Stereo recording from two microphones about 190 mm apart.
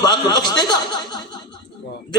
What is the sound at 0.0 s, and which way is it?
Speech, 20° left (ahead or behind).